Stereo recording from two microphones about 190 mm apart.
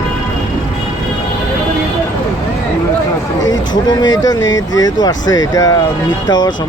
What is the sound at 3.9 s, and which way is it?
Speech, 20° left (ahead or behind).